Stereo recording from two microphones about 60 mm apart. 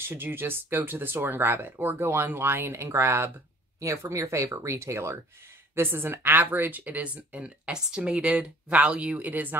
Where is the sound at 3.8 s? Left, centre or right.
Right.